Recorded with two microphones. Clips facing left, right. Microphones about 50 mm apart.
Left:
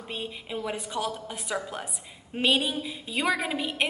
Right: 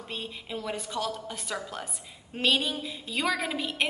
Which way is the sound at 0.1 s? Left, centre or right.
Centre.